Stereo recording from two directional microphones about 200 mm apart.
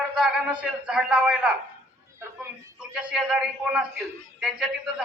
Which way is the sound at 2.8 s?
5° right (ahead or behind).